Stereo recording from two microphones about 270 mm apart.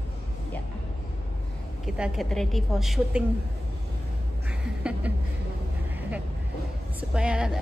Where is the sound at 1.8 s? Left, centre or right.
Centre.